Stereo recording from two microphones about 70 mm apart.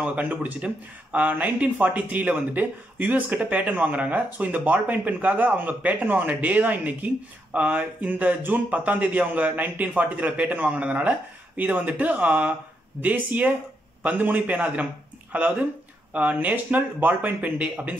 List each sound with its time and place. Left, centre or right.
0.0 s speech: right